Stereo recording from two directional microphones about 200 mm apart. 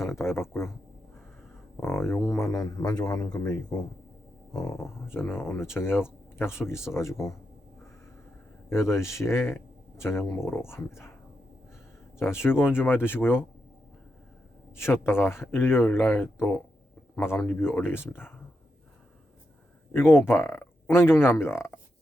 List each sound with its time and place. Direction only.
0.0 s speech: 15° left (ahead or behind)
1.7 s speech: 10° left (ahead or behind)
4.5 s speech: 15° left (ahead or behind)
9.0 s speech: 15° left (ahead or behind)
12.2 s speech: 10° left (ahead or behind)
14.8 s speech: 10° left (ahead or behind)
19.9 s speech: 10° left (ahead or behind)